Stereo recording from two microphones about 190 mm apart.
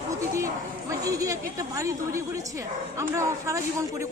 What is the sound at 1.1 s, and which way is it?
A woman's voice, 15° right (ahead or behind).